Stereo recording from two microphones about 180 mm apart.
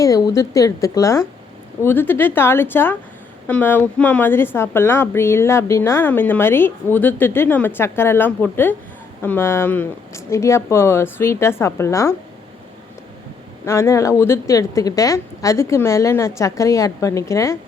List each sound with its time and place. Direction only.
0.0 s a woman's voice: 20° left (ahead or behind)
13.7 s a woman's voice: 15° left (ahead or behind)